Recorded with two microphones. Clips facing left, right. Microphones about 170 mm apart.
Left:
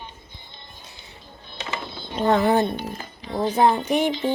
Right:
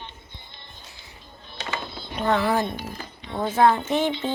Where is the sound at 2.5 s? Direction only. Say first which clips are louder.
Left 4 dB; 25° left (ahead or behind).